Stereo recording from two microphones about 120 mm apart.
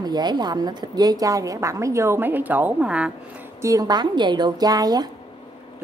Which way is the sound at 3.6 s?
30° right (ahead or behind).